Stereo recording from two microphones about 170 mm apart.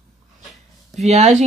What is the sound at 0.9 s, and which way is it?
Speech, 40° right (ahead or behind).